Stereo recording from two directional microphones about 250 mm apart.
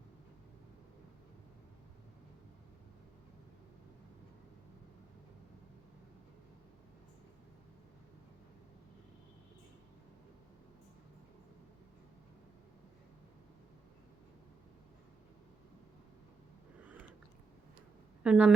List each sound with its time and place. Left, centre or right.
16.8 s chewing: centre
18.2 s speech: centre